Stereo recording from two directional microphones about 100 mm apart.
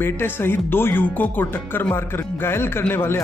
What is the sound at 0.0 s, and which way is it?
A man's voice, 20° left (ahead or behind).